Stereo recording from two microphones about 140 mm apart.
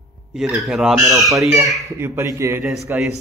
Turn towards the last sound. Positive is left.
turn(degrees=-15)  # may be behind; listen again after turning